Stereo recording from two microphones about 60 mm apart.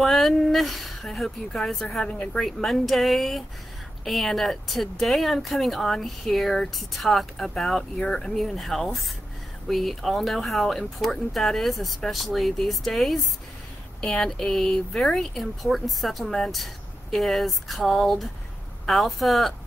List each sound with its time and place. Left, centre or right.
0.0 s speech: centre